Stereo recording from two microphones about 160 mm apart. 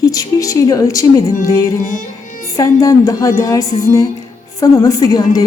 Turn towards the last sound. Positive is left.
turn(degrees=20)  # may be behind; listen again after turning